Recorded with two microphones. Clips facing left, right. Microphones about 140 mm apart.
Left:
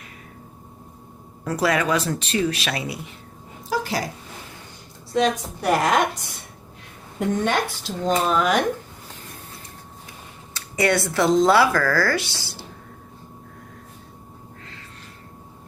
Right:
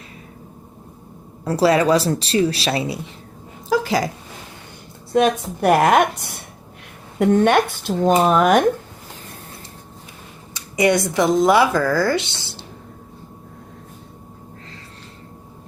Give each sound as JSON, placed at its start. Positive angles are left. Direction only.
{"t": 1.5, "sound": "speech", "side_deg": -30}
{"t": 3.7, "sound": "a sound", "side_deg": -90}
{"t": 5.1, "sound": "speech", "side_deg": -50}
{"t": 10.5, "sound": "speech", "side_deg": -15}